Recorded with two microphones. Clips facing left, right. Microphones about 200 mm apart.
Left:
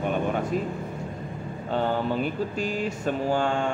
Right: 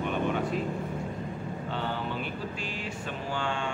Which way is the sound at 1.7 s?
45° left (ahead or behind).